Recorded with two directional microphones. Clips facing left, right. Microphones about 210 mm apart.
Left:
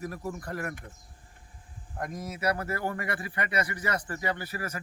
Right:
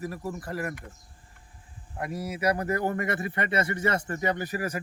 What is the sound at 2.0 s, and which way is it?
A man's voice, 10° right (ahead or behind).